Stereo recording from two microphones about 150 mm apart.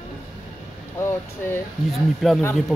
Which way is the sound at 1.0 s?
20° left (ahead or behind).